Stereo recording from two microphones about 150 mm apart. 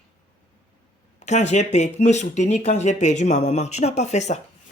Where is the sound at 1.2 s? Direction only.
50° left (ahead or behind).